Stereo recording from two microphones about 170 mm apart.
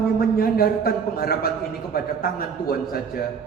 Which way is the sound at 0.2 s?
60° left (ahead or behind).